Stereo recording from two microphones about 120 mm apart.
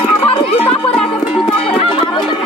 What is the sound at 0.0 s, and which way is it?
Music, 50° left (ahead or behind).